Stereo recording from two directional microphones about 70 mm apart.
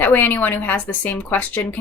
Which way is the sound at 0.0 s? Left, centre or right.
Left.